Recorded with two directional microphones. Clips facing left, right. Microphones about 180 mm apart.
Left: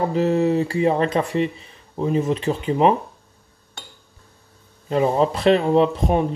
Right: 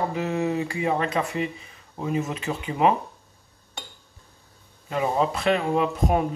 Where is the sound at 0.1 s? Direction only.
35° left (ahead or behind).